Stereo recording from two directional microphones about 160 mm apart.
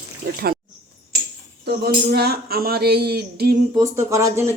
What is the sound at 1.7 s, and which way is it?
Speech, 85° right.